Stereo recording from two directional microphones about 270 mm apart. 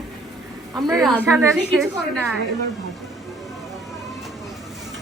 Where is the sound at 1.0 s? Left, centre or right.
Centre.